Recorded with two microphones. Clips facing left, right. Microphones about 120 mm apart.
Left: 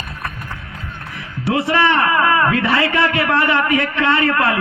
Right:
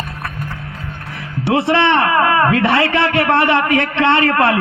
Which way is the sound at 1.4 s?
70° right (ahead or behind).